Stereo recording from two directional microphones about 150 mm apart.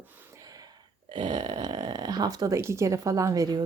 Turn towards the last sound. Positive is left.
turn(degrees=-25)  # may be behind; listen again after turning